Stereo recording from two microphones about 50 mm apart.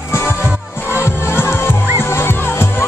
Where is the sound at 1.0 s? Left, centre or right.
Left.